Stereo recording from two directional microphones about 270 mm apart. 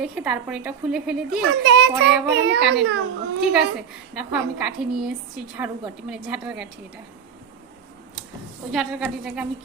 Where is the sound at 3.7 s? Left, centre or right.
Centre.